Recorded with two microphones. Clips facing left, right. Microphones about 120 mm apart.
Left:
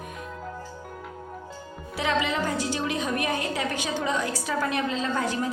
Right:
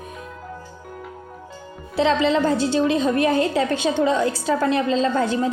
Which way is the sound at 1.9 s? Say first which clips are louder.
Right 8 dB; 30° right (ahead or behind).